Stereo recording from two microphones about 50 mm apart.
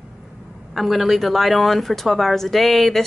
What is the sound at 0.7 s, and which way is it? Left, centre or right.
Speech, centre.